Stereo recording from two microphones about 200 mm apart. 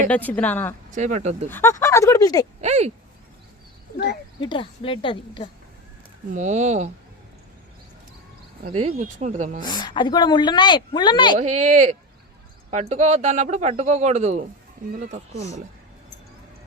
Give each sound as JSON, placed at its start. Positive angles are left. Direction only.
{"t": 0.1, "sound": "speech", "side_deg": 10}
{"t": 0.9, "sound": "a man's voice", "side_deg": -35}
{"t": 1.5, "sound": "speech", "side_deg": 10}
{"t": 2.6, "sound": "a man's voice", "side_deg": -30}
{"t": 3.9, "sound": "speech", "side_deg": 55}
{"t": 4.4, "sound": "speech", "side_deg": 25}
{"t": 6.3, "sound": "a man's voice", "side_deg": -35}
{"t": 8.6, "sound": "a man's voice", "side_deg": -30}
{"t": 9.6, "sound": "speech", "side_deg": 20}
{"t": 11.3, "sound": "a man's voice", "side_deg": -35}